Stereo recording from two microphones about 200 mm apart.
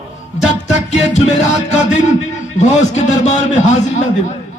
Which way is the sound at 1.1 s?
35° left (ahead or behind).